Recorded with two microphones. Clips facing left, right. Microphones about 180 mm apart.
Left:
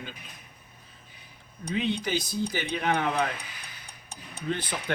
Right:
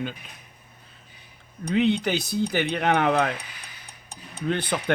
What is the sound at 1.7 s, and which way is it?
A man's voice, 65° right (ahead or behind).